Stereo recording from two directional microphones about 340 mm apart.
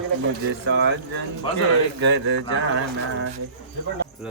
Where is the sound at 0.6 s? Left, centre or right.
Right.